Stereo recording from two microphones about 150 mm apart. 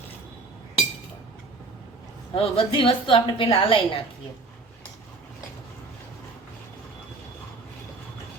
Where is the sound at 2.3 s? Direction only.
40° left (ahead or behind).